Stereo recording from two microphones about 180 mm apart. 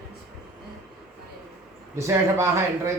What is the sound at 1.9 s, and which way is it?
Speech, 15° right (ahead or behind).